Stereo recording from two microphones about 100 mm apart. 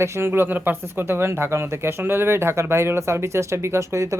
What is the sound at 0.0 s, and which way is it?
Speech, 25° right (ahead or behind).